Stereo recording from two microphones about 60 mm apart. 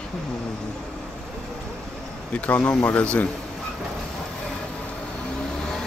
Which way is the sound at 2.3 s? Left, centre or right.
Left.